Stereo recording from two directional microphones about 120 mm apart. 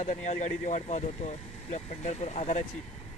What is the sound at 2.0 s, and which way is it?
Speech, 75° left (ahead or behind).